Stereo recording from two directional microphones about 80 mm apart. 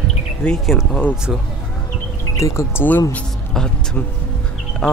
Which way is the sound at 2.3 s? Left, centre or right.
Left.